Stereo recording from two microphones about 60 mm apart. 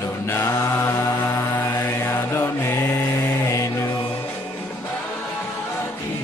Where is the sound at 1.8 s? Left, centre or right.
Left.